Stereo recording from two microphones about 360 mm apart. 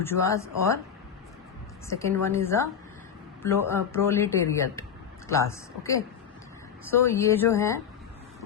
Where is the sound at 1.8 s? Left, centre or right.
Centre.